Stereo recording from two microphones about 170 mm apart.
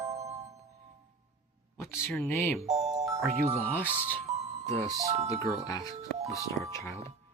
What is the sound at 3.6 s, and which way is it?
Speech, 10° left (ahead or behind).